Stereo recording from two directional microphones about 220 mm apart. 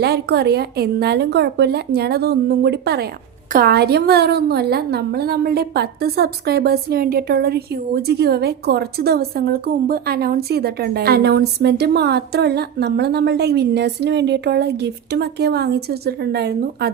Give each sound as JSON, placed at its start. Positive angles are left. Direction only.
{"t": 0.0, "sound": "a woman's voice", "side_deg": -45}